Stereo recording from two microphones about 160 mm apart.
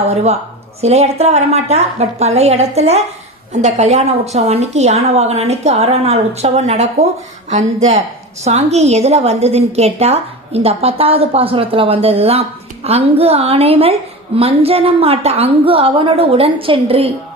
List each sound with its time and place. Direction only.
0.1 s a woman's voice: 40° right (ahead or behind)